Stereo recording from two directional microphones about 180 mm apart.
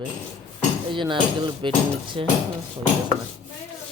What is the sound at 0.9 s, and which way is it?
Speech, 25° right (ahead or behind).